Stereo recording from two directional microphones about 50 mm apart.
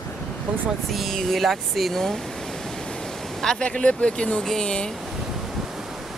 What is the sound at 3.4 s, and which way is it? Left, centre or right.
Speech, centre.